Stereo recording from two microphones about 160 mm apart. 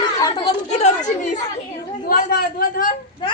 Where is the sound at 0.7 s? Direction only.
45° left (ahead or behind).